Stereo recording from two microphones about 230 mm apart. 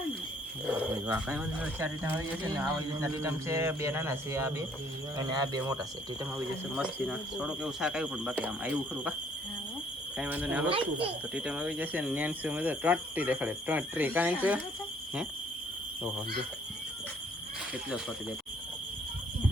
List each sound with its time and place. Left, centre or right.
0.7 s speech: centre
6.3 s speech: centre
10.2 s speech: centre
10.7 s speech: right
11.3 s speech: centre
17.8 s speech: centre